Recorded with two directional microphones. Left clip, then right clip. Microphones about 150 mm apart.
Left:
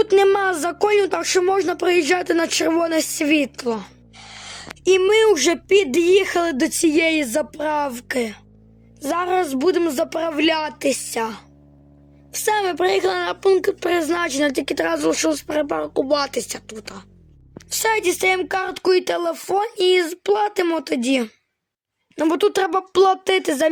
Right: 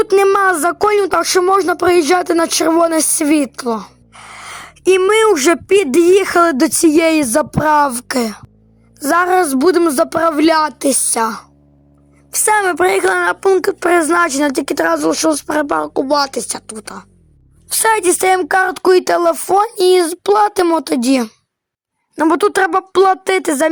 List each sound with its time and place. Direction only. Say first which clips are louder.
0.1 s speech: right 5 dB; 5° right (ahead or behind)
0.7 s a woman's voice: right 5 dB; 20° right (ahead or behind)
4.4 s a sound: right 5 dB; 20° right (ahead or behind)
5.3 s a woman's voice: right 5 dB; 30° right (ahead or behind)
14.9 s a woman's voice: right 5 dB; 20° right (ahead or behind)